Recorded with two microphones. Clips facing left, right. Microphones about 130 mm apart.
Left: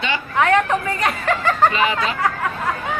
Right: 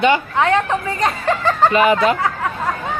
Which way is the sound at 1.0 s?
30° right (ahead or behind).